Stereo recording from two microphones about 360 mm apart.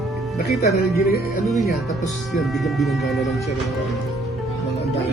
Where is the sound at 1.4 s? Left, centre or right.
Centre.